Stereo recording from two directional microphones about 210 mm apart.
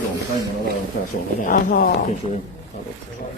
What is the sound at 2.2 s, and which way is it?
Speech, 25° left (ahead or behind).